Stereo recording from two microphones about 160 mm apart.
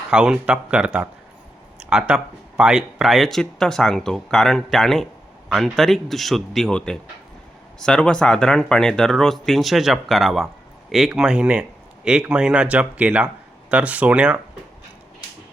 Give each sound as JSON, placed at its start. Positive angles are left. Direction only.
{"t": 0.1, "sound": "speech", "side_deg": -5}
{"t": 1.9, "sound": "speech", "side_deg": -5}